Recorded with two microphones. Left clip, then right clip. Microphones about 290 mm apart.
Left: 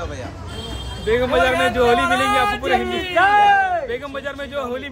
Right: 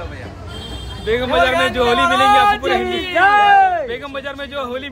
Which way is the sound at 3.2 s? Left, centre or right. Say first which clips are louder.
Right 3 dB; right.